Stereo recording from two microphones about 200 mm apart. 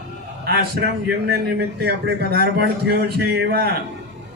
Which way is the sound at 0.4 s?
55° right (ahead or behind).